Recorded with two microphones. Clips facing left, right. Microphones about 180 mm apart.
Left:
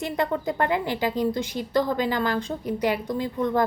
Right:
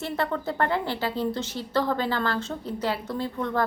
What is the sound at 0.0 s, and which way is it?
A woman's voice, 15° left (ahead or behind).